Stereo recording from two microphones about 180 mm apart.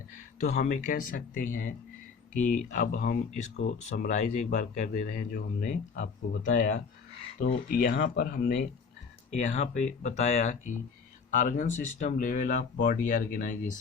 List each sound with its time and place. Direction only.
0.3 s speech: 40° left (ahead or behind)
7.3 s speech: 60° left (ahead or behind)
9.5 s speech: 40° left (ahead or behind)